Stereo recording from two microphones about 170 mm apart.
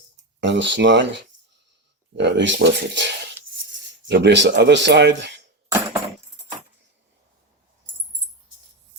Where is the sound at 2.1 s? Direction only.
90° right.